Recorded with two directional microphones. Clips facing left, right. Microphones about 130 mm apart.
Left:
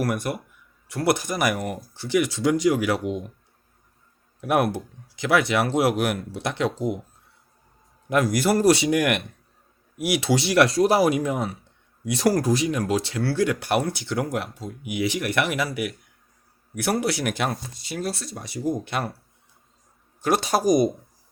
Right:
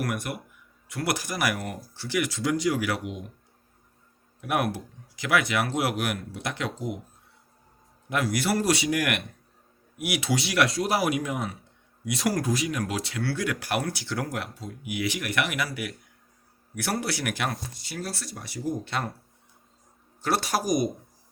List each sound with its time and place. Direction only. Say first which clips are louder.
0.0 s speech: left 5 dB; 35° left (ahead or behind)
4.4 s speech: left 5 dB; 35° left (ahead or behind)
8.1 s a man's voice: left 5 dB; 45° left (ahead or behind)
8.7 s speech: left 5 dB; 25° left (ahead or behind)
20.2 s speech: left 5 dB; 20° left (ahead or behind)